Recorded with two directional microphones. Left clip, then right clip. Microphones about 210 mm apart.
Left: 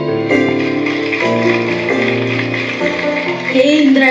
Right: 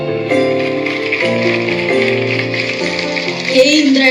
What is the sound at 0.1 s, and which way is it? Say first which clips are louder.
Music: even; 40° left (ahead or behind).